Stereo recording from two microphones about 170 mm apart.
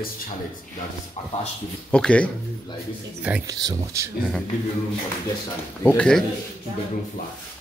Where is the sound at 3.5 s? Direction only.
20° right (ahead or behind).